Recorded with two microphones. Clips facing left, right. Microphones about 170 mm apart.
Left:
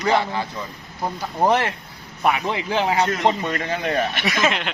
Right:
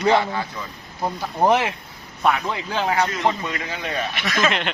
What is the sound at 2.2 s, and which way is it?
Speech, 20° left (ahead or behind).